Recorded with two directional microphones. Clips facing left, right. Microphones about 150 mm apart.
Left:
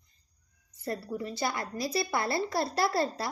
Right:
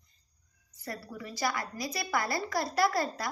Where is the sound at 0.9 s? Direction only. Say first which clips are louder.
Left 6 dB; 30° left (ahead or behind).